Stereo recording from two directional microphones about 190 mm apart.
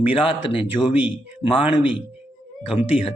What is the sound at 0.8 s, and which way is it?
Speech, 10° right (ahead or behind).